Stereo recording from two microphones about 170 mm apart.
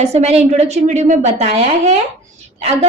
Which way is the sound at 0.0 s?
40° right (ahead or behind).